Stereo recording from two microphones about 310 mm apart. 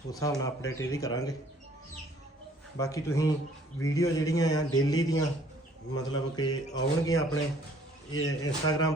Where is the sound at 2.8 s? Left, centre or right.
Centre.